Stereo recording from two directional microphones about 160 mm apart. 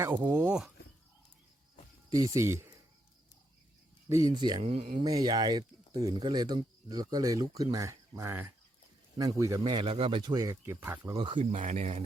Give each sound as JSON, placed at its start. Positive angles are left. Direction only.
{"t": 0.0, "sound": "speech", "side_deg": -10}
{"t": 2.0, "sound": "speech", "side_deg": -20}
{"t": 4.1, "sound": "speech", "side_deg": -25}
{"t": 4.6, "sound": "speech", "side_deg": -40}
{"t": 4.9, "sound": "speech", "side_deg": -25}
{"t": 11.3, "sound": "speech", "side_deg": -50}